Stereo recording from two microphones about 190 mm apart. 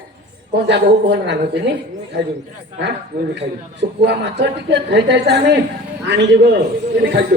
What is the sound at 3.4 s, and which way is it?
A man's voice, 65° right (ahead or behind).